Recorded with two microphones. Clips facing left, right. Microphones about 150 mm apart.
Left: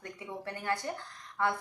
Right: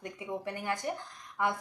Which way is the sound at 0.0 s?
15° right (ahead or behind).